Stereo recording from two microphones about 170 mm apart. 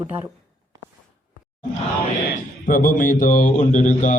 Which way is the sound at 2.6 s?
55° left (ahead or behind).